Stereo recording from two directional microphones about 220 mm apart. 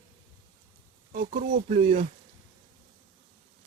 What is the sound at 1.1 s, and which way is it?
Speech, 30° right (ahead or behind).